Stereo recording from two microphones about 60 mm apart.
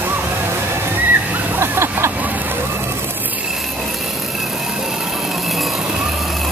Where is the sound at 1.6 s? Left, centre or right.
Right.